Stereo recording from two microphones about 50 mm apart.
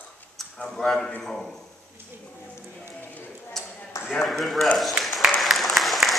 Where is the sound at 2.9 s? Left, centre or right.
Left.